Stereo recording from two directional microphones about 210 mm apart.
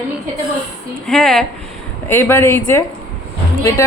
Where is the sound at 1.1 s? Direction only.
Centre (ahead or behind).